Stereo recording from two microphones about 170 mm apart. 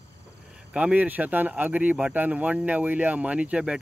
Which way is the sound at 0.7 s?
10° right (ahead or behind).